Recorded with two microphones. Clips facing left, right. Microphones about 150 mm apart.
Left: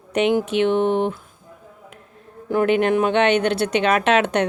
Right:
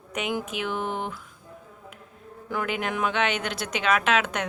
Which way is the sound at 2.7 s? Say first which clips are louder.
Left 10 dB; 55° left (ahead or behind).